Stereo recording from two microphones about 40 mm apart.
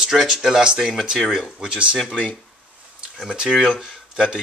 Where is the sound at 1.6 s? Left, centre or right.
Right.